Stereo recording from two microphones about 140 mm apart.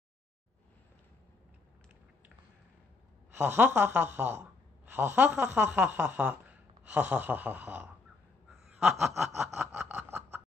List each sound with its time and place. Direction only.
3.3 s speech: 15° right (ahead or behind)
8.5 s snicker: 5° right (ahead or behind)
9.7 s snicker: 15° right (ahead or behind)